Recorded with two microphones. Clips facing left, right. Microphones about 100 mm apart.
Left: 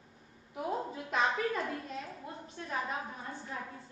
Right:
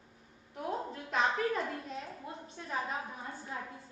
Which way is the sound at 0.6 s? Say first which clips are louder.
Left 2 dB; 5° left (ahead or behind).